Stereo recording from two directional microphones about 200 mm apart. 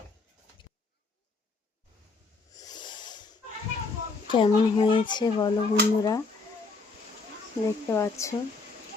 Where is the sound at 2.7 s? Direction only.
20° left (ahead or behind).